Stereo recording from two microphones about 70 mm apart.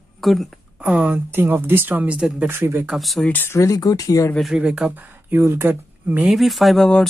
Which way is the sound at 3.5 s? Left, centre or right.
Left.